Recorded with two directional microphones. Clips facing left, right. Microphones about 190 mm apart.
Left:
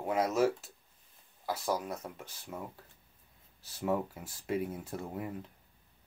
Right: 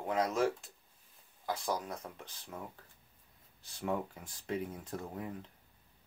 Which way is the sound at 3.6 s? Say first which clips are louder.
Left 4 dB; 5° left (ahead or behind).